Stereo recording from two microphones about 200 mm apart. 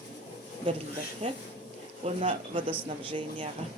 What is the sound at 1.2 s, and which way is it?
Speech, 40° right (ahead or behind).